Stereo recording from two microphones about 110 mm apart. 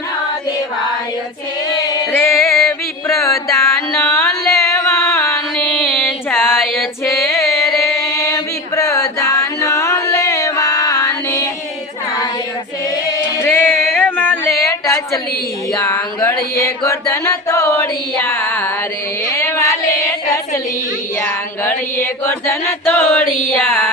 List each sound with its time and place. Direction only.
2.1 s music: 25° left (ahead or behind)
2.6 s music: centre (ahead or behind)
3.2 s mantra: 30° left (ahead or behind)
3.8 s music: 5° left (ahead or behind)
4.1 s carnatic music: 25° left (ahead or behind)
4.5 s music: 25° left (ahead or behind)
5.5 s music: 5° left (ahead or behind)
6.3 s female singing: 20° left (ahead or behind)
7.8 s chant: 25° left (ahead or behind)
13.4 s music: 20° left (ahead or behind)
14.5 s a sound: 30° left (ahead or behind)
16.6 s chant: 30° left (ahead or behind)
19.4 s a sound: 20° left (ahead or behind)
21.2 s a sound: 20° left (ahead or behind)